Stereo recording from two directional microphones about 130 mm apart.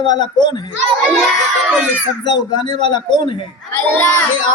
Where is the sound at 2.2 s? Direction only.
35° left (ahead or behind).